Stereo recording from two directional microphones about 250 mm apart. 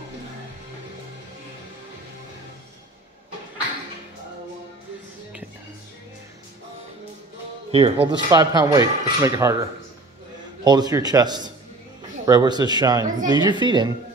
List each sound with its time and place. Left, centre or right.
7.7 s speech: right
10.6 s speech: centre